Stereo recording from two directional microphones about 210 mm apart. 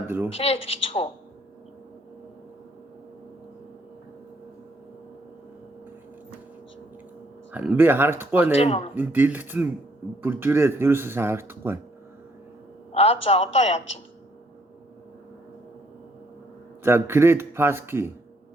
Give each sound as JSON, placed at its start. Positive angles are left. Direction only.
{"t": 0.3, "sound": "a man's voice", "side_deg": 30}
{"t": 7.5, "sound": "speech", "side_deg": -5}
{"t": 12.9, "sound": "a man's voice", "side_deg": 30}
{"t": 16.8, "sound": "speech", "side_deg": -10}